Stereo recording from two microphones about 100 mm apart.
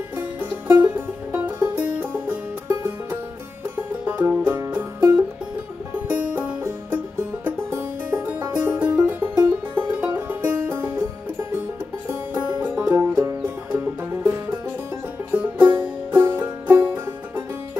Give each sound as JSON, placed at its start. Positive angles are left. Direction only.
{"t": 0.1, "sound": "music", "side_deg": -15}
{"t": 12.1, "sound": "music", "side_deg": -15}